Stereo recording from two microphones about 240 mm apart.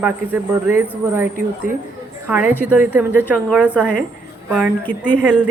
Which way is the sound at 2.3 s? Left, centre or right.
Centre.